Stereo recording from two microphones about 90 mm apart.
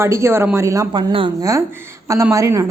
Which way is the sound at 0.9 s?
65° right (ahead or behind).